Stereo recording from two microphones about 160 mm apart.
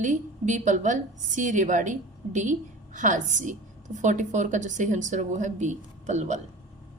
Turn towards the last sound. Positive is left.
turn(degrees=-45)  # may be behind; listen again after turning